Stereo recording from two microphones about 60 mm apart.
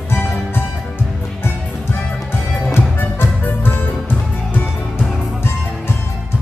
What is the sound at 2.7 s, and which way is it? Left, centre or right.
Music, left.